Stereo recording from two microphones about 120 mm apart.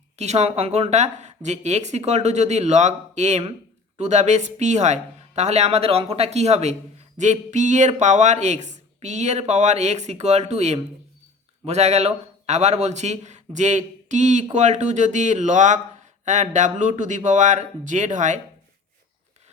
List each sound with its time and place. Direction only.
0.2 s a man's voice: 65° right (ahead or behind)
7.2 s a man's voice: 90° right